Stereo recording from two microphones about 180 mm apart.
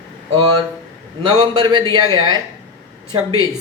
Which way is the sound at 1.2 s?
25° right (ahead or behind).